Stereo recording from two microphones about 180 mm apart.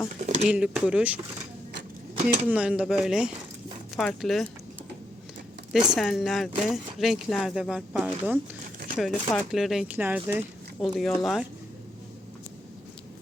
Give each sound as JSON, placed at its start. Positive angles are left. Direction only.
{"t": 0.2, "sound": "a sound", "side_deg": -40}
{"t": 0.4, "sound": "speech", "side_deg": -5}
{"t": 2.5, "sound": "speech", "side_deg": -5}
{"t": 5.9, "sound": "speech", "side_deg": 0}